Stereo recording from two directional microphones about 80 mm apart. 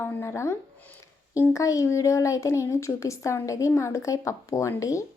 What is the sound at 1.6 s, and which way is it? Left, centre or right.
Speech, left.